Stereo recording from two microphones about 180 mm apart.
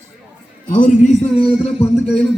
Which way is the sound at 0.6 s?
45° left (ahead or behind).